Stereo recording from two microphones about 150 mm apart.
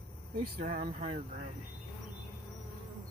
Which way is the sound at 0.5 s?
55° right (ahead or behind).